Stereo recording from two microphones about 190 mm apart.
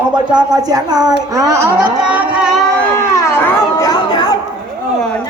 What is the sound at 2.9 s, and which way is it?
Chatter, 15° left (ahead or behind).